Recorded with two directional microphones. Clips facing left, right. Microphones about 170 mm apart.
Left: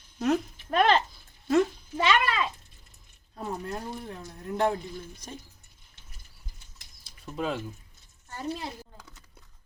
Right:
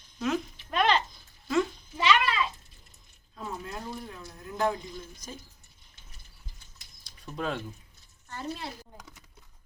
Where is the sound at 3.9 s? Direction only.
30° left (ahead or behind).